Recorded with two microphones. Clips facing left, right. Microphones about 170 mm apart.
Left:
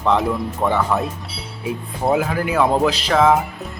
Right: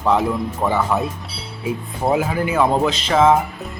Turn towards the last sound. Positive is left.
turn(degrees=0)  # may be behind; listen again after turning